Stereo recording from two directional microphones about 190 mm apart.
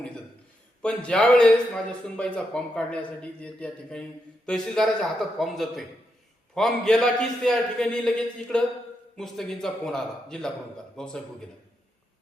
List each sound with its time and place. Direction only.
0.8 s a man's voice: 5° left (ahead or behind)